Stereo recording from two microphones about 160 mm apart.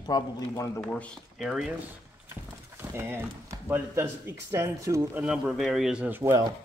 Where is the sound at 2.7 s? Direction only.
15° right (ahead or behind).